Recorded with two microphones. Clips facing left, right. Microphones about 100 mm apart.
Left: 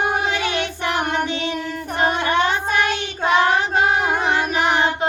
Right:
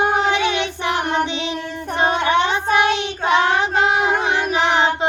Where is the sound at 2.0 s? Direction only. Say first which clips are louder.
Right 2 dB; 25° right (ahead or behind).